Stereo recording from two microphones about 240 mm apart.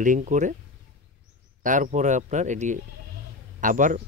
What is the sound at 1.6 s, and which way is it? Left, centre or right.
Speech, right.